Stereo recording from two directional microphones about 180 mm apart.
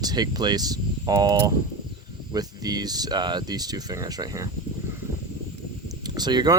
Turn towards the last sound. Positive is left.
turn(degrees=-25)  # may be behind; listen again after turning